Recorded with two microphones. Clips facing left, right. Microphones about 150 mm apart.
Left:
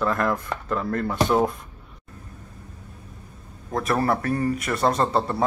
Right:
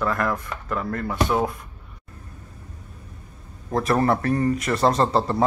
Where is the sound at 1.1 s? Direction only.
Centre (ahead or behind).